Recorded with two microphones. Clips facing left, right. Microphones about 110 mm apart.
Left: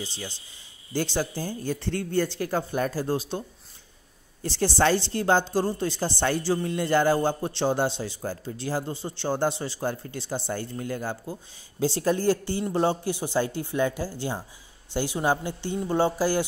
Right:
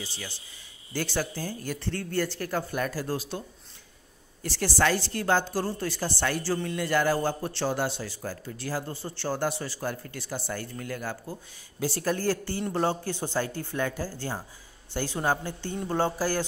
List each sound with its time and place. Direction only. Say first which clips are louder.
0.0 s a woman's voice: left 3 dB; 20° left (ahead or behind)